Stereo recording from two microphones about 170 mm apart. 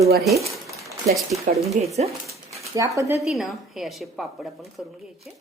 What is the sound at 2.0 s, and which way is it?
Speech, 40° right (ahead or behind).